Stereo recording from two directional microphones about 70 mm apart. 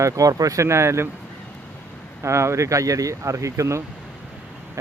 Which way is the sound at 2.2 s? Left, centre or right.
Right.